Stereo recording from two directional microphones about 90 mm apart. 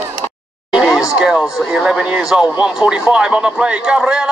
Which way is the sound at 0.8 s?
5° right (ahead or behind).